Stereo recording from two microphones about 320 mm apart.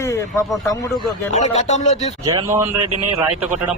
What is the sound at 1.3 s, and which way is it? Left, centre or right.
Speech, left.